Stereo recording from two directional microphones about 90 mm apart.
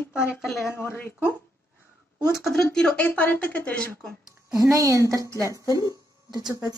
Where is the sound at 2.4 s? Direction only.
5° left (ahead or behind).